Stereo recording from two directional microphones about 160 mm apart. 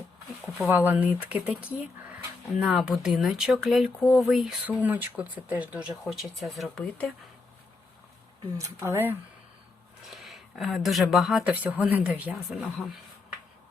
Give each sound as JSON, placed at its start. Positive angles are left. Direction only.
{"t": 0.7, "sound": "speech", "side_deg": -10}
{"t": 2.6, "sound": "speech", "side_deg": 0}
{"t": 8.5, "sound": "speech", "side_deg": -20}
{"t": 10.1, "sound": "speech", "side_deg": 0}